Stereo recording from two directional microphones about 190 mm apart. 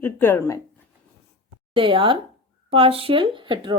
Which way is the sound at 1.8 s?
25° right (ahead or behind).